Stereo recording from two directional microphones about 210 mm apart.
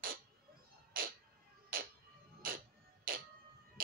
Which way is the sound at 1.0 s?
45° right (ahead or behind).